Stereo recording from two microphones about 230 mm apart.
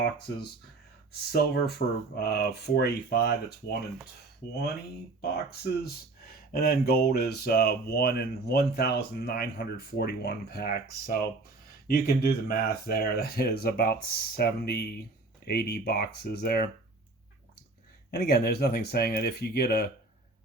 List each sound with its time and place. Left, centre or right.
1.3 s speech: left
5.2 s speech: left
18.1 s speech: left